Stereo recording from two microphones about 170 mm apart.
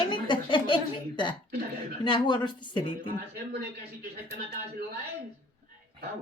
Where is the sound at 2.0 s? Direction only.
25° left (ahead or behind).